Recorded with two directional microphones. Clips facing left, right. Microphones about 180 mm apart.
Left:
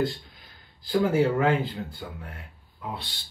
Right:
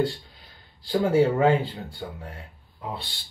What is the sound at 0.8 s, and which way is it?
Speech, 30° right (ahead or behind).